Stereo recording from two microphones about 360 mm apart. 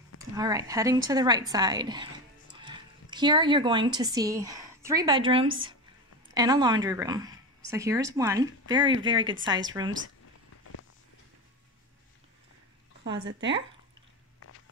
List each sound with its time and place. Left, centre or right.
0.3 s speech: centre
13.0 s speech: right